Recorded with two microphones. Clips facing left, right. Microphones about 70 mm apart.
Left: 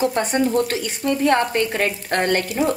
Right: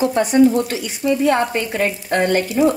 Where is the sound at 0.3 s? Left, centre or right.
Left.